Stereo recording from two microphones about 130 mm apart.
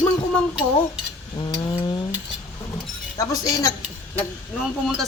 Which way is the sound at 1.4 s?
35° left (ahead or behind).